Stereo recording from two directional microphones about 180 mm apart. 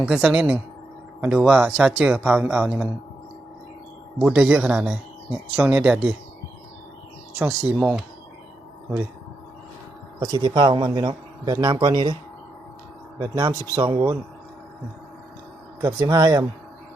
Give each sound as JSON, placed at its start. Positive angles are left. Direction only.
{"t": 0.0, "sound": "speech", "side_deg": -5}
{"t": 4.2, "sound": "speech", "side_deg": -5}
{"t": 7.3, "sound": "speech", "side_deg": -10}
{"t": 10.2, "sound": "a man's voice", "side_deg": -20}
{"t": 13.1, "sound": "a man's voice", "side_deg": -25}
{"t": 15.8, "sound": "a man's voice", "side_deg": -20}